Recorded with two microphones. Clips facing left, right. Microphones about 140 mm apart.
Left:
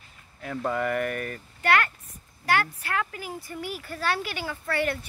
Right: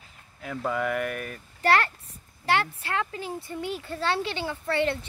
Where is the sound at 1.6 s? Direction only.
35° right (ahead or behind).